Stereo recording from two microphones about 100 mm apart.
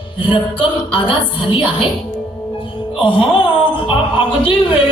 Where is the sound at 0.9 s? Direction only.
60° left (ahead or behind).